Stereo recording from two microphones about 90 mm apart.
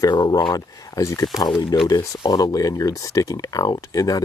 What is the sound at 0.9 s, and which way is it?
Speech, 35° left (ahead or behind).